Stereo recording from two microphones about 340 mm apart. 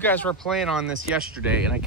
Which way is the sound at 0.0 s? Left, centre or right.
Centre.